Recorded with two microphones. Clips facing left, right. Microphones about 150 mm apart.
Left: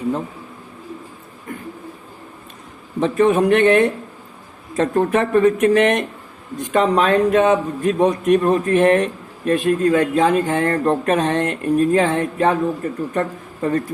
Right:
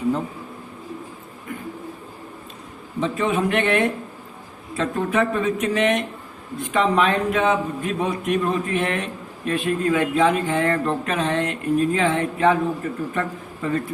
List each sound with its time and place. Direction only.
3.0 s a man's voice: 45° left (ahead or behind)